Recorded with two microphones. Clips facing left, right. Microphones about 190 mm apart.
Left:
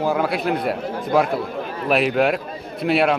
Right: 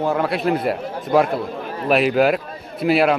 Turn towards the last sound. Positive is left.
turn(degrees=0)  # may be behind; listen again after turning